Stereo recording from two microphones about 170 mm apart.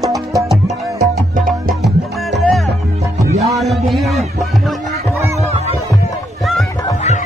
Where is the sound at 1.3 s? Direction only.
55° right (ahead or behind).